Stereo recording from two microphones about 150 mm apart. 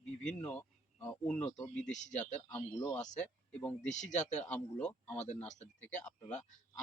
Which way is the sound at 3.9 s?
55° left (ahead or behind).